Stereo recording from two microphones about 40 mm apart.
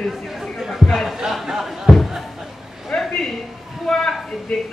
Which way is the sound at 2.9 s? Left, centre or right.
Left.